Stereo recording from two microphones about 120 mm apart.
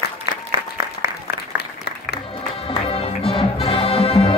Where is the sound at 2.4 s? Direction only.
50° left (ahead or behind).